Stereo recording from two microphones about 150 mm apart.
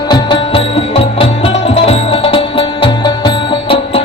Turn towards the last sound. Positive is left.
turn(degrees=35)  # may be behind; listen again after turning